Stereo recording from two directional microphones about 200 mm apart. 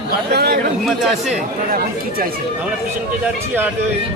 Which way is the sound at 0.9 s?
Centre (ahead or behind).